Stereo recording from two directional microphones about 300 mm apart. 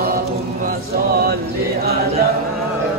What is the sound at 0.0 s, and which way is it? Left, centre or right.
Chant, right.